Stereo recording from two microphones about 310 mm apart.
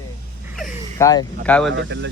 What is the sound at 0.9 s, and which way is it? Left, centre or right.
Speech, centre.